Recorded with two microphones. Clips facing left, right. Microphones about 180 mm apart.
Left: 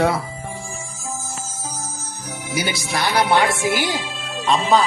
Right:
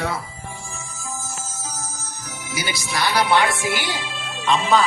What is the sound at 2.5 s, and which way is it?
Speech, 55° left (ahead or behind).